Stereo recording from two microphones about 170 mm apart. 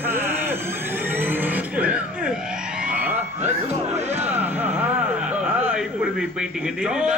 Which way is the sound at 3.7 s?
40° right (ahead or behind).